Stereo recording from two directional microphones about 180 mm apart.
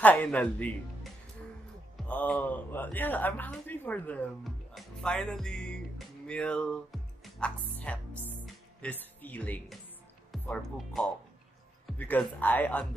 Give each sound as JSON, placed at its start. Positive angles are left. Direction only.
{"t": 0.0, "sound": "speech", "side_deg": 10}
{"t": 2.0, "sound": "speech", "side_deg": 5}